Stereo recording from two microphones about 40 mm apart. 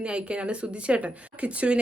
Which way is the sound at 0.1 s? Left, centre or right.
Right.